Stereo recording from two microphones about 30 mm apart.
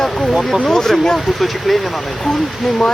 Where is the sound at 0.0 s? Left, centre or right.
Centre.